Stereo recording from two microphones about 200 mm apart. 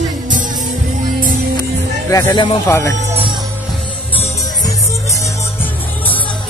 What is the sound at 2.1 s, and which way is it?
Speech, 20° left (ahead or behind).